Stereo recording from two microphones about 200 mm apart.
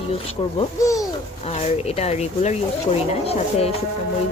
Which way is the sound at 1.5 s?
30° left (ahead or behind).